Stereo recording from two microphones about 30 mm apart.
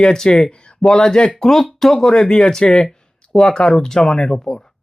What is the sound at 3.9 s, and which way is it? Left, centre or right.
Speech, left.